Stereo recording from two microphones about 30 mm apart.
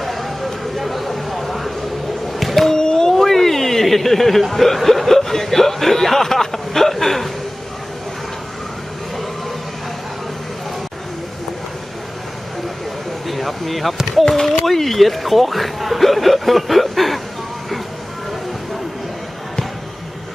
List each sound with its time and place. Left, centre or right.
0.0 s a sound: centre
2.3 s music: centre
2.6 s music: left
3.1 s chuckle: centre
13.2 s a sound: centre
14.6 s speech: centre